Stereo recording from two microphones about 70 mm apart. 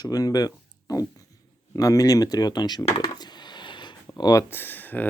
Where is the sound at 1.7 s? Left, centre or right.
Left.